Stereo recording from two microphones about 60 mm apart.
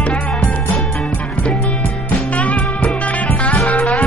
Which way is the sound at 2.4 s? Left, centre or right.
Left.